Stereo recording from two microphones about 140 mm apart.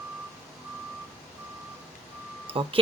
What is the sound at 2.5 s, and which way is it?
Speech, 40° right (ahead or behind).